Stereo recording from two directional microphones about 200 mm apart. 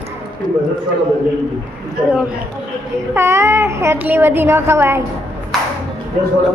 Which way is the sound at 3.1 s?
15° right (ahead or behind).